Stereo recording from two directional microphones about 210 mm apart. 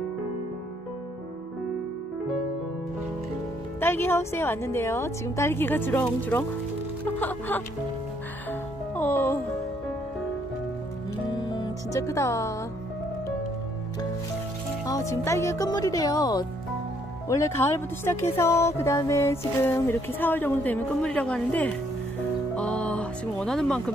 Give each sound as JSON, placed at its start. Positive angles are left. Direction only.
{"t": 3.8, "sound": "speech", "side_deg": 10}
{"t": 8.5, "sound": "music", "side_deg": 10}
{"t": 11.5, "sound": "speech", "side_deg": 20}
{"t": 14.9, "sound": "speech", "side_deg": 15}
{"t": 22.6, "sound": "a sound", "side_deg": 5}